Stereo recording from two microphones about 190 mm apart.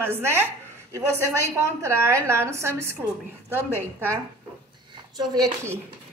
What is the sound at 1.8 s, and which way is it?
A woman's voice, 15° right (ahead or behind).